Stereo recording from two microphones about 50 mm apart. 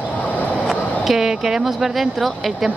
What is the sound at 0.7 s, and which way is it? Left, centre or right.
Speech, centre.